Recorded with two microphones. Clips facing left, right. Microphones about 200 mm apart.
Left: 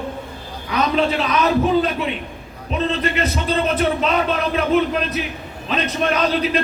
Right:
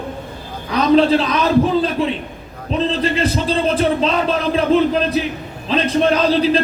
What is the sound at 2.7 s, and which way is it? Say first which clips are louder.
A man's voice: right 3 dB; 30° right (ahead or behind).